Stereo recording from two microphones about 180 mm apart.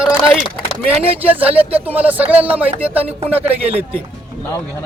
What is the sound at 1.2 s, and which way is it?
Speech, 10° right (ahead or behind).